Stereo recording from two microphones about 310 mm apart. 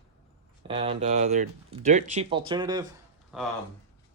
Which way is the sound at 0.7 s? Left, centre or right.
Centre.